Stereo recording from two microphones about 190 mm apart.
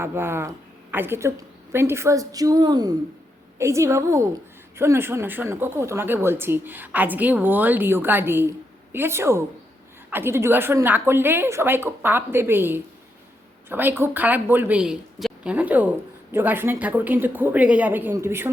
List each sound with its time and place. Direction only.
0.0 s a woman's voice: 10° right (ahead or behind)